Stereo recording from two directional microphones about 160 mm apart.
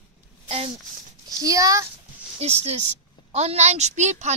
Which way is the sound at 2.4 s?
40° right (ahead or behind).